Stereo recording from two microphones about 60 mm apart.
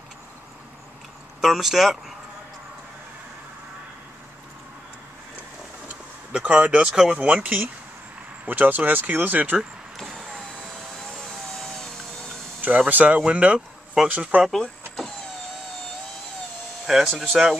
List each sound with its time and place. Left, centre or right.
1.4 s speech: centre
5.9 s a sound: centre
7.1 s speech: right
10.0 s vehicle: centre
11.0 s vehicle: centre
12.6 s speech: right
16.8 s speech: centre